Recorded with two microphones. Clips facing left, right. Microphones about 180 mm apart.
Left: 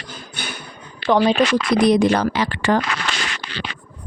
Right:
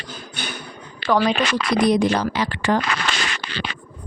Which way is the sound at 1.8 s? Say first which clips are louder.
Left 3 dB; 70° left (ahead or behind).